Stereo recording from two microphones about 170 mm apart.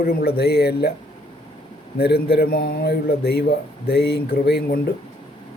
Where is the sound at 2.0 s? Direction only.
65° left (ahead or behind).